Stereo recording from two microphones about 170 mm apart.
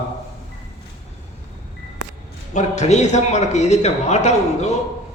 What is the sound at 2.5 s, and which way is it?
A man's voice, 45° left (ahead or behind).